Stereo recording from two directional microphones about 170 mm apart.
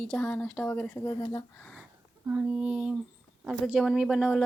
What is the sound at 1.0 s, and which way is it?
Speech, 20° left (ahead or behind).